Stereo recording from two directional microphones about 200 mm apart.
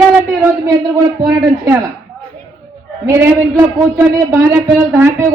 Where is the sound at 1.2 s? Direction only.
20° right (ahead or behind).